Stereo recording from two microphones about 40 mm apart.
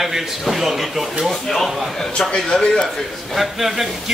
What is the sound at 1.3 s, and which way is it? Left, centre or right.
Speech, centre.